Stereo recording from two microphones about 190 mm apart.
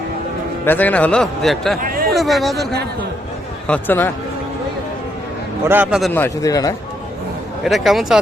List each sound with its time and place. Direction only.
0.6 s a man's voice: 10° left (ahead or behind)
1.8 s speech: 50° right (ahead or behind)
2.1 s a man's voice: centre (ahead or behind)
5.6 s a man's voice: 10° right (ahead or behind)
6.1 s a man's voice: 15° left (ahead or behind)
7.6 s a man's voice: centre (ahead or behind)